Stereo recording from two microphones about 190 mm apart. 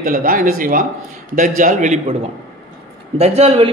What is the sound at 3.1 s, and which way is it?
Speech, 35° right (ahead or behind).